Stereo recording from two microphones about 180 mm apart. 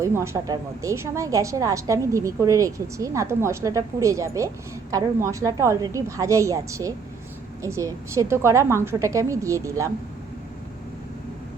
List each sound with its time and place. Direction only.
0.0 s a woman's voice: 15° right (ahead or behind)